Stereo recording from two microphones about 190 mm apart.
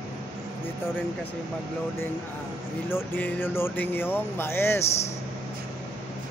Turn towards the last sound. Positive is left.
turn(degrees=10)  # may be behind; listen again after turning